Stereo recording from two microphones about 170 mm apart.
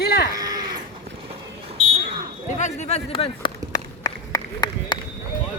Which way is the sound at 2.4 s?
45° left (ahead or behind).